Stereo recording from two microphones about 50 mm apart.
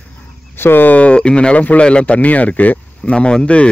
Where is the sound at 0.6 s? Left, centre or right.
Left.